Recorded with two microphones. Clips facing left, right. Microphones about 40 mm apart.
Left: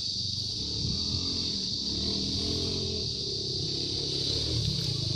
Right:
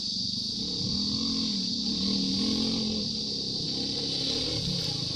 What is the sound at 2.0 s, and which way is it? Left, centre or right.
Vehicle, right.